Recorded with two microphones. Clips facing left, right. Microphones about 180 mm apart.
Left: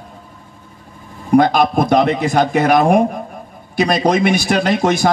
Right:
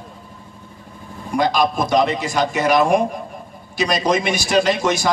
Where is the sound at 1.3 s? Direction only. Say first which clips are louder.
Left 6 dB; 55° left (ahead or behind).